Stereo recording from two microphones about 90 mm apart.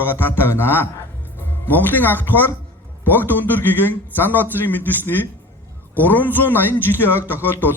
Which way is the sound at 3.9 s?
20° left (ahead or behind).